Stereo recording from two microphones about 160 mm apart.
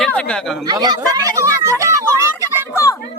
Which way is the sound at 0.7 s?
25° right (ahead or behind).